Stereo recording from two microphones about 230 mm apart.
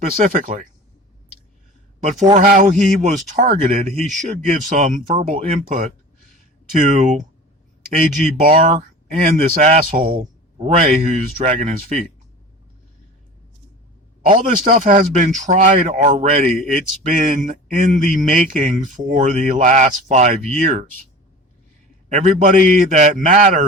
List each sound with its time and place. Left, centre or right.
0.2 s speech: right
2.2 s speech: right
14.2 s speech: right
22.1 s speech: right